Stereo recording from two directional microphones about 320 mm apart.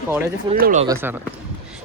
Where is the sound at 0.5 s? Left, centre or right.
Right.